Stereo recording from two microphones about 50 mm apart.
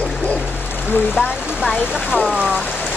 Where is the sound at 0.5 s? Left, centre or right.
Left.